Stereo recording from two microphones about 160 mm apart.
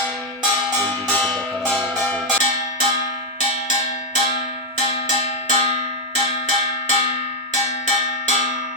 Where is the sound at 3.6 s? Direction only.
45° left (ahead or behind).